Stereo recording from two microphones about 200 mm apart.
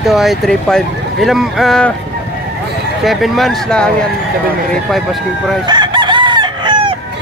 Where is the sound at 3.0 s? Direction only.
Centre (ahead or behind).